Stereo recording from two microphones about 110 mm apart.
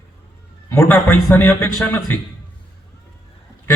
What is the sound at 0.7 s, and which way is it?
A man's voice, 25° left (ahead or behind).